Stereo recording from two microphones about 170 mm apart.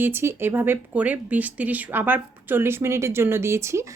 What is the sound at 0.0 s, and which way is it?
Speech, 15° right (ahead or behind).